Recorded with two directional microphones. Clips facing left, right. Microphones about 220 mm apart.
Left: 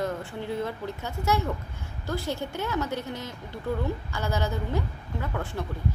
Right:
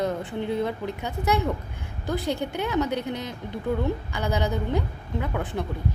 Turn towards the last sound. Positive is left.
turn(degrees=-15)  # may be behind; listen again after turning